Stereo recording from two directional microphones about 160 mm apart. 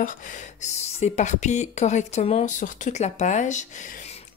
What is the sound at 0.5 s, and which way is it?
Speech, 45° left (ahead or behind).